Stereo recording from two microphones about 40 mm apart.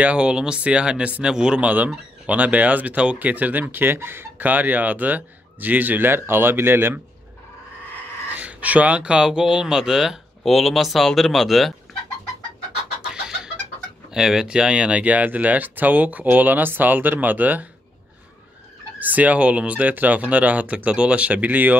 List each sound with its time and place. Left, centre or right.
0.0 s speech: right
1.6 s speech: right
4.4 s speech: right
8.4 s a sound: right
9.0 s speech: right
10.4 s speech: centre
14.1 s speech: centre; by 17.6 s right
18.9 s speech: right
19.9 s speech: right